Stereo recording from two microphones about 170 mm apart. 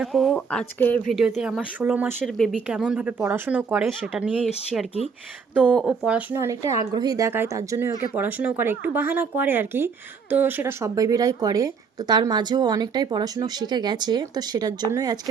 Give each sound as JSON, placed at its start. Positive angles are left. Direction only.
{"t": 0.0, "sound": "speech", "side_deg": 0}
{"t": 1.4, "sound": "speech", "side_deg": -5}
{"t": 2.2, "sound": "speech", "side_deg": 0}